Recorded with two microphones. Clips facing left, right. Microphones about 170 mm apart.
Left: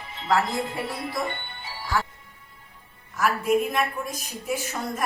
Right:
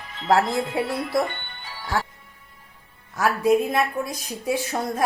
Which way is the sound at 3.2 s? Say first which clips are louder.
Right 3 dB; 80° right.